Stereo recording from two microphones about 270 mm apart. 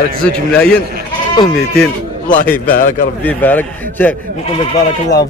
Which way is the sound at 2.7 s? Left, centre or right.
Left.